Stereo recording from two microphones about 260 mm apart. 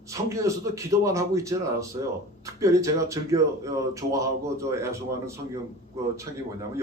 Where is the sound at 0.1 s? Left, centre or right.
Centre.